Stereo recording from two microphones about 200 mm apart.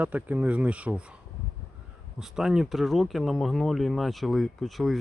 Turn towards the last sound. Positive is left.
turn(degrees=0)  # may be behind; listen again after turning